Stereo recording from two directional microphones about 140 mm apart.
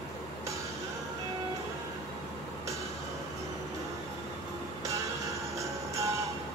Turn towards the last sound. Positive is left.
turn(degrees=-20)  # may be behind; listen again after turning